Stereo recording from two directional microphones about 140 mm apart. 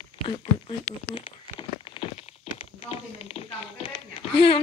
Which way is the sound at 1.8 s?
40° left (ahead or behind).